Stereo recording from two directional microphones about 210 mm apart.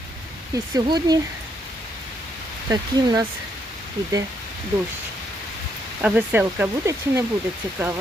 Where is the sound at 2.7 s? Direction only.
20° right (ahead or behind).